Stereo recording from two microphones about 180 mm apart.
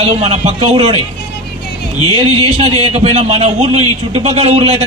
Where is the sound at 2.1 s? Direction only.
30° right (ahead or behind).